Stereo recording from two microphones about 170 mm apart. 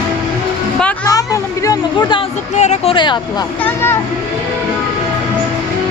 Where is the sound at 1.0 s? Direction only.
20° left (ahead or behind).